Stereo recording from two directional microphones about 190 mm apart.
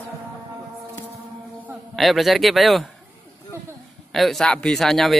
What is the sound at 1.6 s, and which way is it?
A man's voice, centre (ahead or behind).